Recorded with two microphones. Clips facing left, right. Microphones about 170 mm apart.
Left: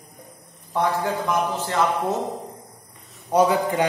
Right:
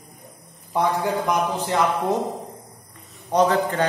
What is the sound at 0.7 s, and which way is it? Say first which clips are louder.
A man's voice: right 1 dB; 15° right (ahead or behind).